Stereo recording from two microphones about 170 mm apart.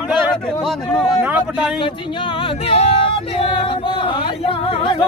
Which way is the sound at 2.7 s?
35° left (ahead or behind).